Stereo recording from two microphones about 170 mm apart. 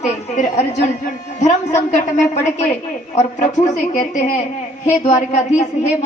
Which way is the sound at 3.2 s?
45° left (ahead or behind).